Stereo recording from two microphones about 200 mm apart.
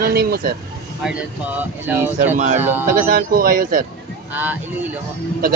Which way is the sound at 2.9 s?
45° right (ahead or behind).